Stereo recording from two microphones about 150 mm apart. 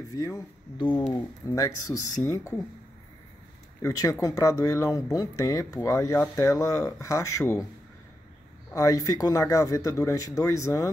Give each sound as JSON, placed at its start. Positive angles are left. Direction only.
{"t": 0.1, "sound": "speech", "side_deg": 25}
{"t": 3.8, "sound": "speech", "side_deg": 20}
{"t": 8.7, "sound": "speech", "side_deg": 20}